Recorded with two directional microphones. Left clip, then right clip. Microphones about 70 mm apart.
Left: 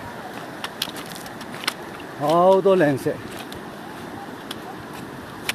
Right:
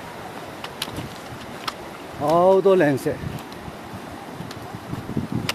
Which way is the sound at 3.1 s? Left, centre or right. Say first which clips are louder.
Even; right.